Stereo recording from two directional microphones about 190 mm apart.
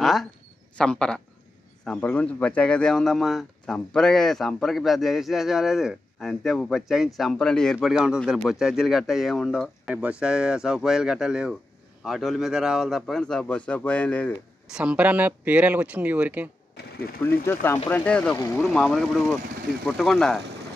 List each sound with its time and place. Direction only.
0.0 s a sound: centre (ahead or behind)
0.7 s speech: 5° left (ahead or behind)
14.7 s speech: 5° right (ahead or behind)
16.7 s speech: 60° left (ahead or behind)
17.5 s speech: 10° left (ahead or behind)
18.6 s speech: centre (ahead or behind)